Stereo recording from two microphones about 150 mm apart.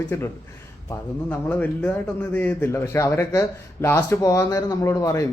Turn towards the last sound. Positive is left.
turn(degrees=20)  # may be behind; listen again after turning